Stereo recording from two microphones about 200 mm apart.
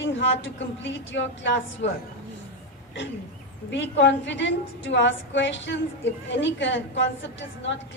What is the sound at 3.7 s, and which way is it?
A woman's voice, 65° left (ahead or behind).